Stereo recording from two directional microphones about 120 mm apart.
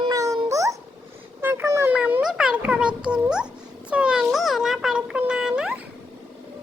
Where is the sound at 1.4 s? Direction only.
20° right (ahead or behind).